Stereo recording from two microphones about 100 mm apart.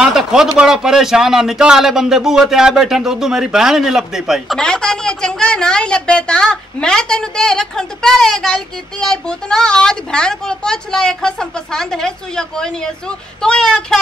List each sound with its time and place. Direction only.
0.0 s speech: 5° right (ahead or behind)
4.6 s a woman's voice: 5° left (ahead or behind)